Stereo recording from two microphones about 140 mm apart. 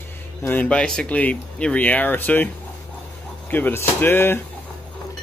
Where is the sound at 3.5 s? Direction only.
15° left (ahead or behind).